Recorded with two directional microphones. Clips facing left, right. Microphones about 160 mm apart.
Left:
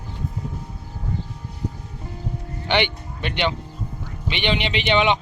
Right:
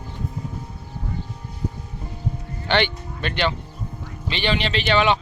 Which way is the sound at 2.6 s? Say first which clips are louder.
Even; 15° left (ahead or behind).